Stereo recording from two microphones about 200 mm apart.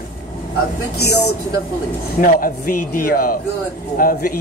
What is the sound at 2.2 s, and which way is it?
Speech, 45° left (ahead or behind).